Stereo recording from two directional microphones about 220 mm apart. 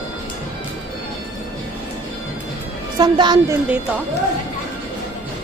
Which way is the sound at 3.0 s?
20° right (ahead or behind).